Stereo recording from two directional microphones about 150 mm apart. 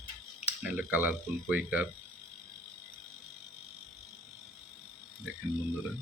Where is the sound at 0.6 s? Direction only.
10° right (ahead or behind).